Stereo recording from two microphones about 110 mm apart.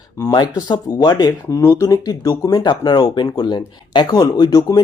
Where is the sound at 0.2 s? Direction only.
35° left (ahead or behind).